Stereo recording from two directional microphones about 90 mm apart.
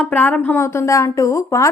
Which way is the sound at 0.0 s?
20° left (ahead or behind).